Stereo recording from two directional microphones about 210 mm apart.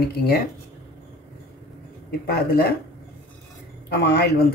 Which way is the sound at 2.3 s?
45° left (ahead or behind).